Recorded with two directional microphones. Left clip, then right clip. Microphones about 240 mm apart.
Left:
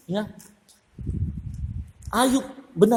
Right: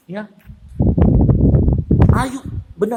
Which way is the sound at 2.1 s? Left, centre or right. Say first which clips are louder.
Even; centre.